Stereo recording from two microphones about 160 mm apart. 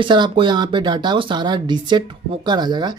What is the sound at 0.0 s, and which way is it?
Speech, 30° right (ahead or behind).